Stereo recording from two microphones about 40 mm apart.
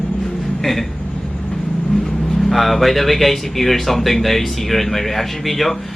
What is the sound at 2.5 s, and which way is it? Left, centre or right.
Speech, centre.